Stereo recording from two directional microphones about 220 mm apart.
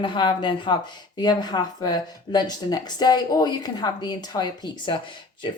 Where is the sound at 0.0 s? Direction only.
20° left (ahead or behind).